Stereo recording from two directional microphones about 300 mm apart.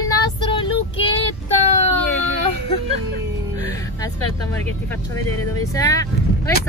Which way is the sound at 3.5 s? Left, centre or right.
Centre.